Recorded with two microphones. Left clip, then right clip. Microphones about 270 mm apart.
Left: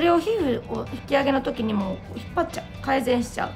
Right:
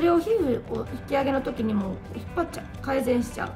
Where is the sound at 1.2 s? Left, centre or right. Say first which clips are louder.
Left 3 dB; centre.